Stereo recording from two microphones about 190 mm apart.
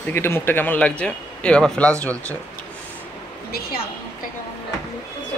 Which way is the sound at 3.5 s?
50° left (ahead or behind).